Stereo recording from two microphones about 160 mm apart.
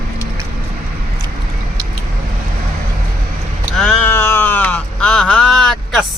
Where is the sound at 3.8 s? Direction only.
10° left (ahead or behind).